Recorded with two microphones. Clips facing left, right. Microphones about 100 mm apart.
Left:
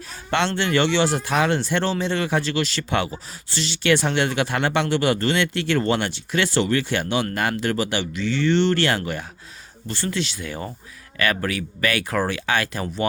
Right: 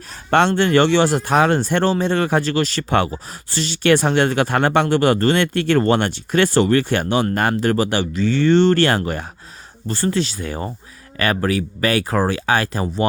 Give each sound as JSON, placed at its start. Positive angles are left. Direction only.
{"t": 0.3, "sound": "speech", "side_deg": -45}